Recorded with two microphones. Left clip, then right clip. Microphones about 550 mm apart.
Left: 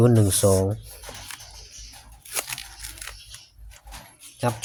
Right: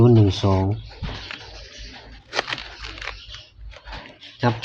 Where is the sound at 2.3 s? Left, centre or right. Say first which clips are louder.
Right 7 dB; left.